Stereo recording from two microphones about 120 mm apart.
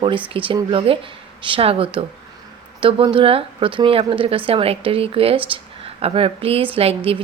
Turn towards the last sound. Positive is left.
turn(degrees=-55)  # may be behind; listen again after turning